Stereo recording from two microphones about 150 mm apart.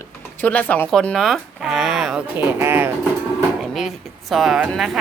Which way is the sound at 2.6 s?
15° right (ahead or behind).